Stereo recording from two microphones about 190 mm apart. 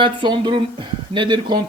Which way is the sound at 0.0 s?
25° right (ahead or behind).